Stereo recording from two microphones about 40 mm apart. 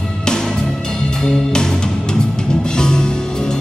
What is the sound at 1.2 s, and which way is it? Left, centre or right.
Music, centre.